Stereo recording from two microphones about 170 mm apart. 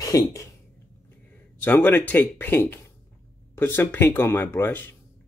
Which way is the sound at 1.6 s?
10° left (ahead or behind).